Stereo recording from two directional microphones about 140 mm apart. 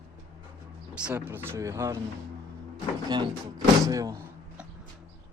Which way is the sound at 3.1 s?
30° right (ahead or behind).